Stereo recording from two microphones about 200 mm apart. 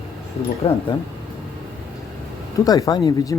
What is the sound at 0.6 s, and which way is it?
Speech, 30° left (ahead or behind).